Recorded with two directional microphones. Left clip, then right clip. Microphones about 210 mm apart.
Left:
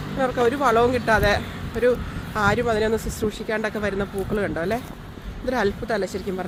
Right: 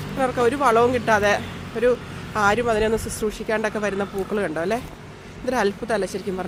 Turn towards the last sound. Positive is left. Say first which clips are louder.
# right 1 dB
turn(degrees=-10)  # may be behind; listen again after turning